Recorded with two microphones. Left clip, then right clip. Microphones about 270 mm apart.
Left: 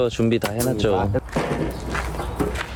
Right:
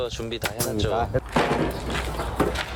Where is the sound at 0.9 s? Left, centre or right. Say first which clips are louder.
Even; centre.